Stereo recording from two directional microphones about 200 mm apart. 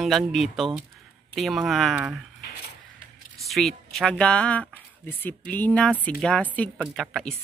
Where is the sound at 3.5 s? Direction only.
Centre (ahead or behind).